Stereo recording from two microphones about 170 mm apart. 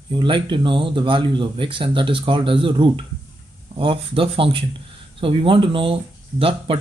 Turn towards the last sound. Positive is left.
turn(degrees=-30)  # may be behind; listen again after turning